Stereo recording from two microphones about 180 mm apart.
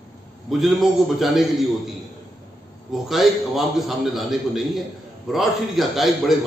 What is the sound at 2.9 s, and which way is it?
A man's voice, centre (ahead or behind).